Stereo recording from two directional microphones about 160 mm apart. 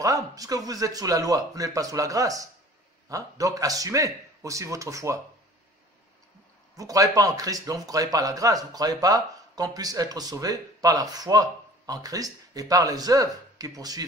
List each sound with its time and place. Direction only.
0.0 s speech: 20° right (ahead or behind)
6.8 s speech: 20° right (ahead or behind)